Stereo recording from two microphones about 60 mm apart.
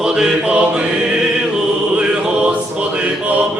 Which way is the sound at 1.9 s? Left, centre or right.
Centre.